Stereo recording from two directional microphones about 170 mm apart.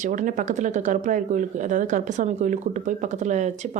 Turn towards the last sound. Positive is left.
turn(degrees=-45)  # may be behind; listen again after turning